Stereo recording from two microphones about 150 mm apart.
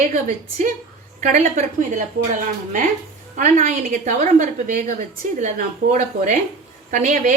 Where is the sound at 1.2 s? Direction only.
55° right (ahead or behind).